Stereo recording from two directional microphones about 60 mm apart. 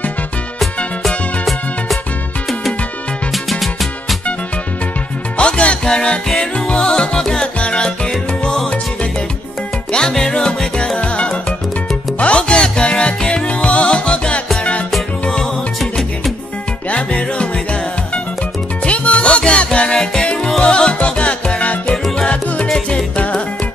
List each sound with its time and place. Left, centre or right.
1.0 s music: centre
3.4 s music: centre
5.4 s music: centre
9.9 s music: centre
15.8 s music: centre
16.9 s music: centre
18.9 s music: left